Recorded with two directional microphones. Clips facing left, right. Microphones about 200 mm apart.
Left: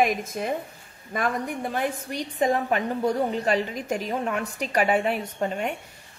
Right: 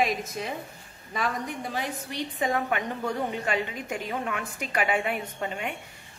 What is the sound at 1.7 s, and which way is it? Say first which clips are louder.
Speech: left 6 dB; 50° left (ahead or behind).